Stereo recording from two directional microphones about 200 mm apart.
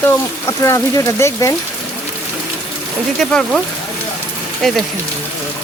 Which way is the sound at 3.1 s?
5° left (ahead or behind).